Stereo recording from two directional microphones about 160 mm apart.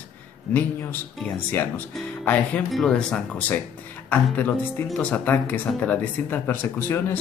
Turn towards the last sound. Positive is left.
turn(degrees=15)  # may be behind; listen again after turning